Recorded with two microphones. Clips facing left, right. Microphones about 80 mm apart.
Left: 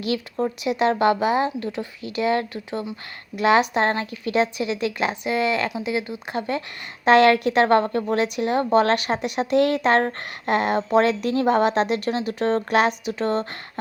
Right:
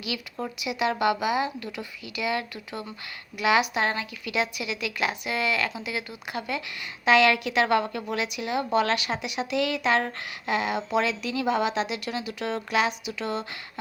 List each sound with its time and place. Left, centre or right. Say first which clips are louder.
0.3 s a woman's voice: left 6 dB; left
7.0 s a woman's voice: left 5 dB; left